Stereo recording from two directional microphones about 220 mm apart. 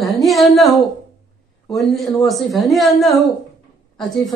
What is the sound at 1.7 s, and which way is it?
Speech, centre (ahead or behind).